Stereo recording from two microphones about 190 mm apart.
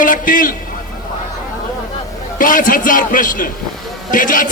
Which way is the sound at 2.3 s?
45° left (ahead or behind).